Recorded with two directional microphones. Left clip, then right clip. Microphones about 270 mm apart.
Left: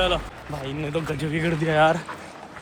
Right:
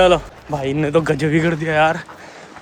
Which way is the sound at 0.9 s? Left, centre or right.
Right.